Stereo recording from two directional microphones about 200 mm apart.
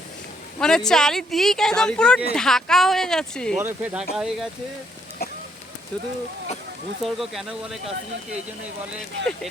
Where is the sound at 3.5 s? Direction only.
10° right (ahead or behind).